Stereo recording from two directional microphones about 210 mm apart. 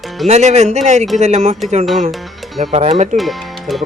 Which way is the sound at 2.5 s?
30° right (ahead or behind).